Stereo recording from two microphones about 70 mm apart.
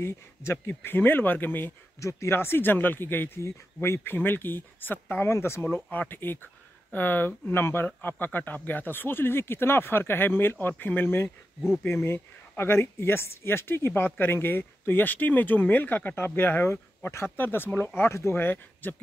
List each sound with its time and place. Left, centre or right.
0.0 s speech: left
2.0 s speech: left
5.2 s speech: left
18.3 s speech: left